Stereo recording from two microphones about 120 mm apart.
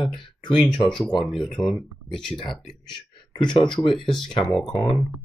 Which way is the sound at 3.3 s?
40° left (ahead or behind).